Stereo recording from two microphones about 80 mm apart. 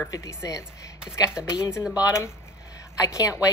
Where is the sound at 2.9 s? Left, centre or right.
Left.